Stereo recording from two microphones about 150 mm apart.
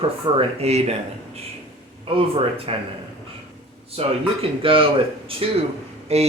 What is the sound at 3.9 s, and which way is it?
Speech, 40° right (ahead or behind).